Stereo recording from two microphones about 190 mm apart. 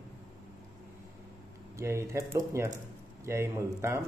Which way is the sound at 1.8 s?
15° right (ahead or behind).